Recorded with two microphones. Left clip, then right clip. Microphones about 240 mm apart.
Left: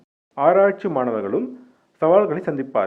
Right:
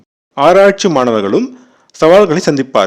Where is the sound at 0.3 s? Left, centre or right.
Right.